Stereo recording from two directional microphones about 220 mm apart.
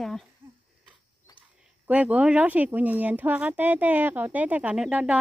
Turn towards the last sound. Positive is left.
turn(degrees=-5)  # may be behind; listen again after turning